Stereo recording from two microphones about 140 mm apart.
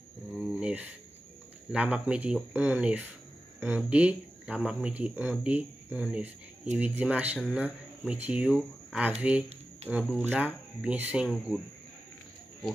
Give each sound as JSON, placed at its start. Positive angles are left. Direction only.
{"t": 0.3, "sound": "a sound", "side_deg": -5}
{"t": 1.7, "sound": "speech", "side_deg": -10}
{"t": 9.8, "sound": "speech", "side_deg": -50}
{"t": 10.4, "sound": "speech", "side_deg": -10}